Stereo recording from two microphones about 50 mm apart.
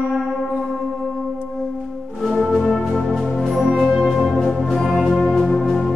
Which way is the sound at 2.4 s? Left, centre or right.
Centre.